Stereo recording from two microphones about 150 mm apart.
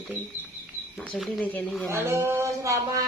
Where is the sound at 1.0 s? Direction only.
Centre (ahead or behind).